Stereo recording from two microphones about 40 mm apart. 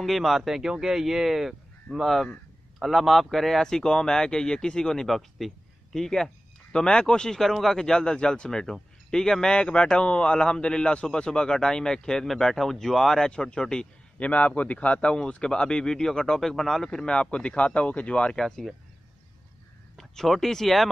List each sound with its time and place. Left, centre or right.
0.0 s speech: centre
0.5 s speech: centre
1.9 s speech: centre
3.8 s speech: centre
5.0 s speech: centre
6.7 s speech: left
13.3 s speech: left
14.2 s speech: left; by 17.1 s centre
17.1 s speech: left
18.4 s speech: centre
20.0 s speech: centre